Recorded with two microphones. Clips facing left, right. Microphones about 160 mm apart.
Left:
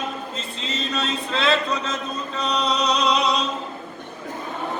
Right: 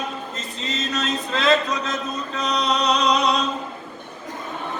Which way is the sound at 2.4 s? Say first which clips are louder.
Right 1 dB; 35° left (ahead or behind).